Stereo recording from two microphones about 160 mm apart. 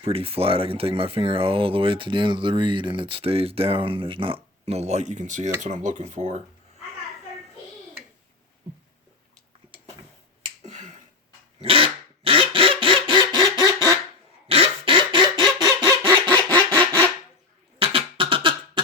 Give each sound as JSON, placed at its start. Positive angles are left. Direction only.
{"t": 0.0, "sound": "speech", "side_deg": -35}
{"t": 10.7, "sound": "finger snapping", "side_deg": -50}
{"t": 11.6, "sound": "quack", "side_deg": -35}
{"t": 14.4, "sound": "a sound", "side_deg": -35}
{"t": 16.6, "sound": "a sound", "side_deg": 10}
{"t": 17.7, "sound": "beatboxing", "side_deg": -35}